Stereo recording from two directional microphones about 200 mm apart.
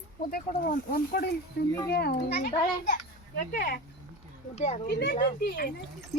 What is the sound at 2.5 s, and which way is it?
A child's voice, 35° left (ahead or behind).